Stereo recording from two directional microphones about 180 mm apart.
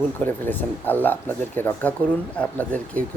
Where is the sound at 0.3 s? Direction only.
10° left (ahead or behind).